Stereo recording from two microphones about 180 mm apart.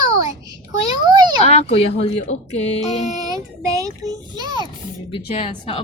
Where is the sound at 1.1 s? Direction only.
25° right (ahead or behind).